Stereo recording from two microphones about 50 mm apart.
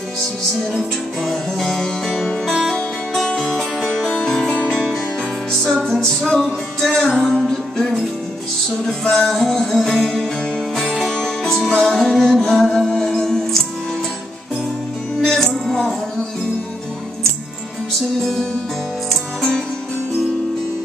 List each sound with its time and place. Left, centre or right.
0.6 s music: centre
4.1 s music: centre
15.2 s music: centre
18.2 s music: centre